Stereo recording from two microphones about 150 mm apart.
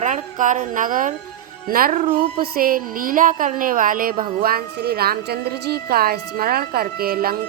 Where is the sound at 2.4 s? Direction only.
70° right (ahead or behind).